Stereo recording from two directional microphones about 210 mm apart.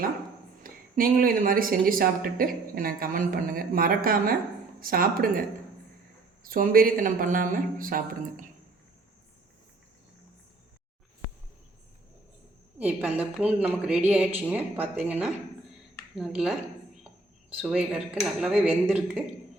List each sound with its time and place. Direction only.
0.6 s speech: 40° right (ahead or behind)
6.5 s a woman's voice: 40° right (ahead or behind)
12.8 s a woman's voice: 5° right (ahead or behind)
17.6 s a woman's voice: centre (ahead or behind)